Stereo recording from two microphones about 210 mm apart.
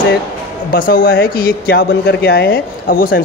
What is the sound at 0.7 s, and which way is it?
Speech, 45° left (ahead or behind).